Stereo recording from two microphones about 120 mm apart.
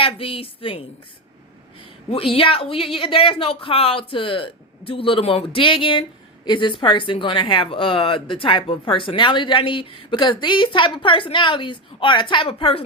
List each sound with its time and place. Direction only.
0.0 s a woman's voice: 50° left (ahead or behind)
2.0 s a woman's voice: 50° left (ahead or behind)